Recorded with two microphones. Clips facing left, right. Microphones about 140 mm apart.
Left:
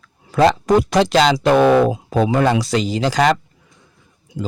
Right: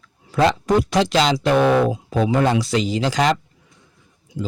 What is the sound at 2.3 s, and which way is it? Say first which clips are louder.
Speech: left 1 dB; 70° left (ahead or behind).